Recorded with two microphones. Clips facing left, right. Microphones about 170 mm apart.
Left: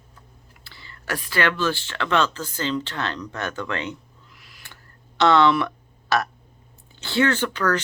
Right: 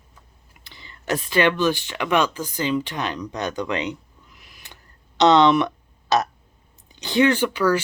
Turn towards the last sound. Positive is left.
turn(degrees=-10)  # may be behind; listen again after turning